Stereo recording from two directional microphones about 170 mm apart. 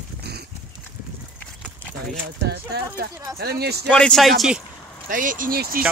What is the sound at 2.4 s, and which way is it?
Speech, 70° right (ahead or behind).